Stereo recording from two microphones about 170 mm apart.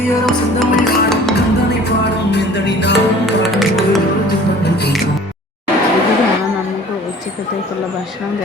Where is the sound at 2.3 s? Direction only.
90° left.